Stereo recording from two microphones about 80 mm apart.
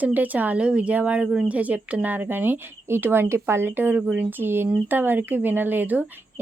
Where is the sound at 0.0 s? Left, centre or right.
Right.